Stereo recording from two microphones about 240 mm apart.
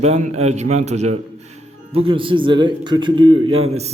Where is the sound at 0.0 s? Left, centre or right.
Right.